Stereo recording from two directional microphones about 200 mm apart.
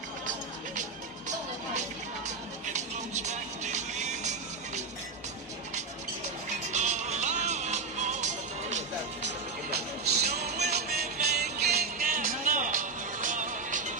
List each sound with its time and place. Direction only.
2.7 s music: 35° right (ahead or behind)
6.7 s music: 35° right (ahead or behind)
10.0 s music: 35° right (ahead or behind)
10.7 s music: 50° right (ahead or behind)